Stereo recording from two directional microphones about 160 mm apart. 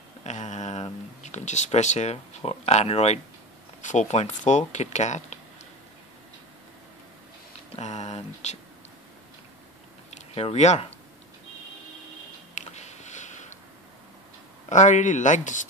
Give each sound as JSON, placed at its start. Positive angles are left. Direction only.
{"t": 0.2, "sound": "speech", "side_deg": 45}
{"t": 7.7, "sound": "speech", "side_deg": 45}
{"t": 10.1, "sound": "speech", "side_deg": 40}
{"t": 12.5, "sound": "a sound", "side_deg": 45}
{"t": 14.7, "sound": "speech", "side_deg": 50}